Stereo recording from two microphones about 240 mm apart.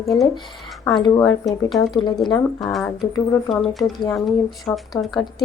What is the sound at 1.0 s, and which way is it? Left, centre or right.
Speech, centre.